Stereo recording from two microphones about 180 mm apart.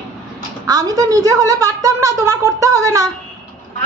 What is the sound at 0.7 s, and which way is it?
A woman's voice, 20° right (ahead or behind).